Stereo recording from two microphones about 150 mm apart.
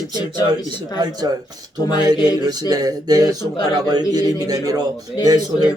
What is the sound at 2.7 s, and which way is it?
A man's voice, 25° right (ahead or behind).